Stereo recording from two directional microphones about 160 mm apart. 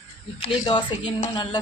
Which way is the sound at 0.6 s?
30° left (ahead or behind).